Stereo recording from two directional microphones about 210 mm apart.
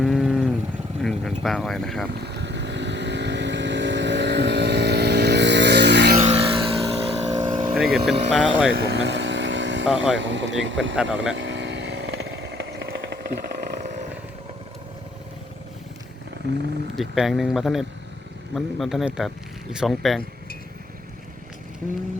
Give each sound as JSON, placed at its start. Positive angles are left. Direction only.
{"t": 0.0, "sound": "a sound", "side_deg": 0}
{"t": 1.0, "sound": "speech", "side_deg": 0}
{"t": 2.1, "sound": "vehicle", "side_deg": -50}
{"t": 6.1, "sound": "vehicle", "side_deg": -30}
{"t": 7.7, "sound": "vehicle", "side_deg": 0}
{"t": 8.0, "sound": "speech", "side_deg": -5}
{"t": 8.9, "sound": "vehicle", "side_deg": -55}
{"t": 9.8, "sound": "speech", "side_deg": -5}
{"t": 10.2, "sound": "speech", "side_deg": -60}
{"t": 10.9, "sound": "speech", "side_deg": -5}
{"t": 11.3, "sound": "vehicle", "side_deg": -55}
{"t": 13.6, "sound": "a sound", "side_deg": -35}
{"t": 16.9, "sound": "speech", "side_deg": 0}